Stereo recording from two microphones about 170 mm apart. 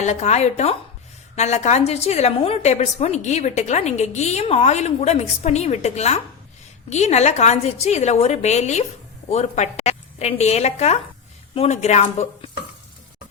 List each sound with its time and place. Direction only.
0.0 s a woman's voice: 40° left (ahead or behind)